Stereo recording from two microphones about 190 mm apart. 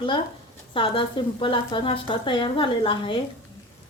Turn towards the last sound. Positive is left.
turn(degrees=25)  # may be behind; listen again after turning